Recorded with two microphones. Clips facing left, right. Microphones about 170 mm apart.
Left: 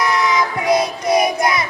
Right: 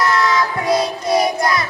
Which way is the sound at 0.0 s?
20° left (ahead or behind).